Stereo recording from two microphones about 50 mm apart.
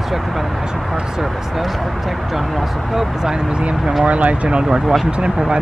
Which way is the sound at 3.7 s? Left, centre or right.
Centre.